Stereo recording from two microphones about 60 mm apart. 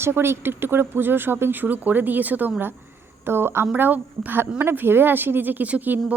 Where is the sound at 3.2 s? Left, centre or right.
Right.